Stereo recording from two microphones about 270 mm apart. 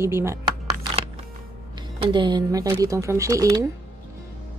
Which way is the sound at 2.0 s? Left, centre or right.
Centre.